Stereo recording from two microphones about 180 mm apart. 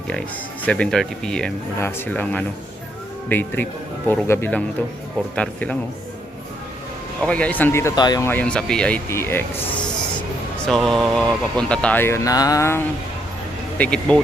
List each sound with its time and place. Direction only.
0.1 s speech: 5° left (ahead or behind)
7.2 s speech: 5° left (ahead or behind); by 8.3 s 20° left (ahead or behind)
8.3 s speech: 5° left (ahead or behind)